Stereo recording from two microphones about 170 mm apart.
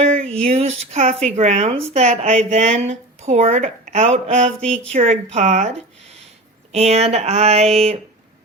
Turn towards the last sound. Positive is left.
turn(degrees=-35)  # may be behind; listen again after turning